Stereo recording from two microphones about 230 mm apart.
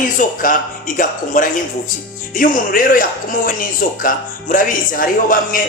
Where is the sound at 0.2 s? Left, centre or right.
Left.